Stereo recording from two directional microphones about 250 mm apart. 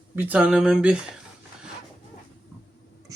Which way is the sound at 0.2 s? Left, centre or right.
Centre.